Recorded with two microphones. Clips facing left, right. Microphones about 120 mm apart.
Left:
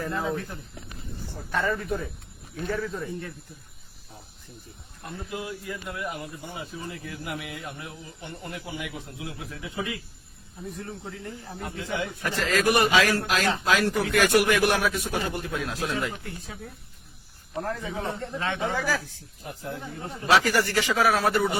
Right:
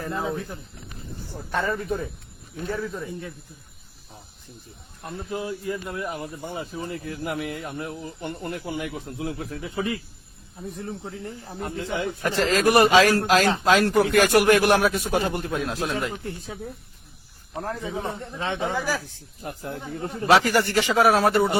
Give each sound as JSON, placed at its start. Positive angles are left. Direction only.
{"t": 1.5, "sound": "speech", "side_deg": -30}
{"t": 2.7, "sound": "a man's voice", "side_deg": -5}
{"t": 5.0, "sound": "speech", "side_deg": -35}
{"t": 11.2, "sound": "speech", "side_deg": -30}
{"t": 12.2, "sound": "speech", "side_deg": -30}
{"t": 17.7, "sound": "speech", "side_deg": -25}
{"t": 18.7, "sound": "speech", "side_deg": -15}
{"t": 19.5, "sound": "speech", "side_deg": -55}
{"t": 20.3, "sound": "speech", "side_deg": -25}